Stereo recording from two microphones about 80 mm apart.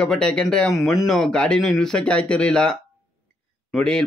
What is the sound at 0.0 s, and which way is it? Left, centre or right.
Speech, centre.